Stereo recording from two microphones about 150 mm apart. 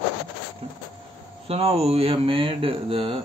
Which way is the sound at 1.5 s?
40° right (ahead or behind).